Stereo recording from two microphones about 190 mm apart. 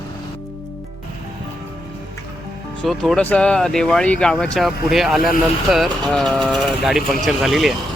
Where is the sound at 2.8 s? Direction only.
Centre (ahead or behind).